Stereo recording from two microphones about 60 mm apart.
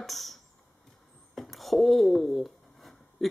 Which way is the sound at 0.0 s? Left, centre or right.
Centre.